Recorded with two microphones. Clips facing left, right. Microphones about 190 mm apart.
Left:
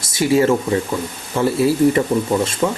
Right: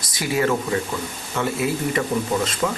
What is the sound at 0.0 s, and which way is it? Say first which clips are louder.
Speech: left 7 dB; 25° left (ahead or behind).